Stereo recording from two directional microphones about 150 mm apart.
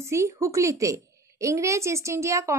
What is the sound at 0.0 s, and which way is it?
A woman's voice, 20° right (ahead or behind).